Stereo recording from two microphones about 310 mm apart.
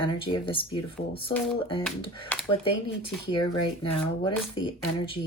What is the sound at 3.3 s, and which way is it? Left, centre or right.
Speech, centre.